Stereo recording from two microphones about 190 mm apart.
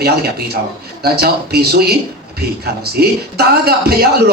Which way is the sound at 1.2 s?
55° right (ahead or behind).